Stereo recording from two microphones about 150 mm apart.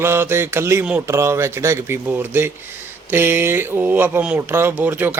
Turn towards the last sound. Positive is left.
turn(degrees=-15)  # may be behind; listen again after turning